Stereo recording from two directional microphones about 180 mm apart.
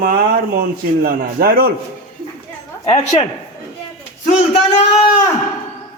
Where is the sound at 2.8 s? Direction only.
40° left (ahead or behind).